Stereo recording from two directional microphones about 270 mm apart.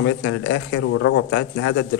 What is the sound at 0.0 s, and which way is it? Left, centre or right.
Speech, left.